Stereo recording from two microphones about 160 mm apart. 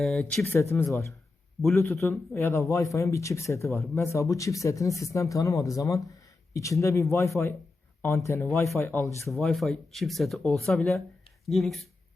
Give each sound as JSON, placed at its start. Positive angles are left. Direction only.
{"t": 0.0, "sound": "speech", "side_deg": 5}
{"t": 0.5, "sound": "speech", "side_deg": 15}
{"t": 9.3, "sound": "speech", "side_deg": 0}